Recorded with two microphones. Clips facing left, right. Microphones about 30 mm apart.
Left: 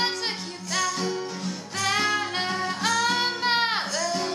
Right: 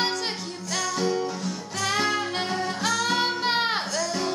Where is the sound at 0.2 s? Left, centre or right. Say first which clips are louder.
Even; centre.